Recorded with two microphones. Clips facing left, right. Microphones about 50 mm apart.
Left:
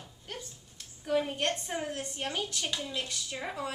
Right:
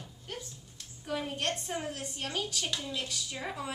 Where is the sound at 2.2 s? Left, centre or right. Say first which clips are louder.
Even; centre.